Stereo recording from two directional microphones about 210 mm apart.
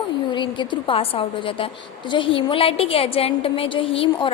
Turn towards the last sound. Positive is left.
turn(degrees=25)  # may be behind; listen again after turning